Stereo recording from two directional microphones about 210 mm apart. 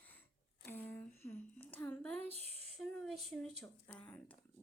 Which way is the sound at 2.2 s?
30° right (ahead or behind).